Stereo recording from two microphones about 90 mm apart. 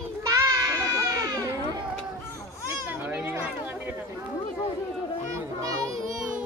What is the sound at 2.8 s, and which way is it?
Speech, 20° right (ahead or behind).